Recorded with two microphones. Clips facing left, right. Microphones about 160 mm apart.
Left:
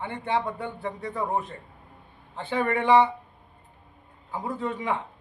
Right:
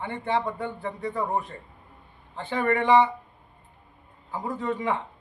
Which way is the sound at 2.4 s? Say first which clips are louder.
Right 1 dB; 15° left (ahead or behind).